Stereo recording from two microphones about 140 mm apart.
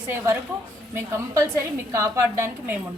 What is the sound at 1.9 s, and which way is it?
Speech, 20° right (ahead or behind).